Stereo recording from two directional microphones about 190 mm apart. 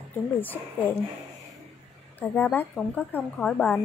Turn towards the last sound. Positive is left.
turn(degrees=5)  # may be behind; listen again after turning